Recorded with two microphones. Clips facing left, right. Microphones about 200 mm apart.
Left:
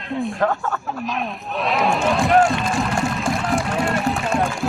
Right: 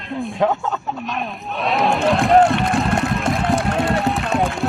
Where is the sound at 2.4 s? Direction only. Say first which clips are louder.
Right 3 dB; 60° right (ahead or behind).